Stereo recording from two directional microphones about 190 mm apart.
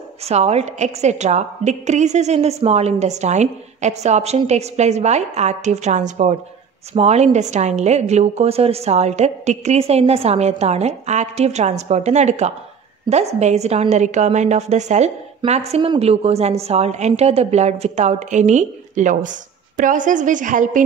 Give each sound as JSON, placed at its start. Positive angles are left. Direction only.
{"t": 0.2, "sound": "a woman's voice", "side_deg": -35}